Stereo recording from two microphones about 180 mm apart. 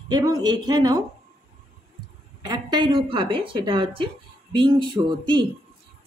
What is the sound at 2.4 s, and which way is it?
A woman's voice, 25° right (ahead or behind).